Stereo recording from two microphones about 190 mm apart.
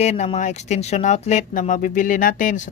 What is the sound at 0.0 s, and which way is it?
Speech, 35° left (ahead or behind).